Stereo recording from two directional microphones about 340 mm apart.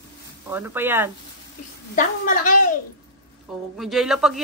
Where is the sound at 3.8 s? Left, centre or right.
Centre.